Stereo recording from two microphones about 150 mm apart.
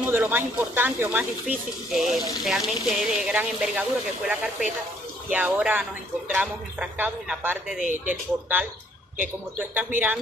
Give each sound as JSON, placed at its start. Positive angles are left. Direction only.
{"t": 0.0, "sound": "speech", "side_deg": -10}
{"t": 5.3, "sound": "speech", "side_deg": -10}
{"t": 7.8, "sound": "speech", "side_deg": -55}
{"t": 8.1, "sound": "speech", "side_deg": -10}